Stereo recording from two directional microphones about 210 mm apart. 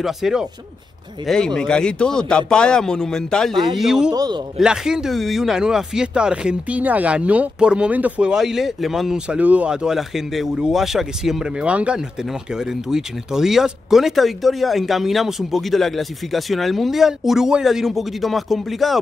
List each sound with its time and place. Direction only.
0.0 s speech: centre (ahead or behind)
4.1 s a man's voice: 20° right (ahead or behind)
4.6 s speech: 5° right (ahead or behind)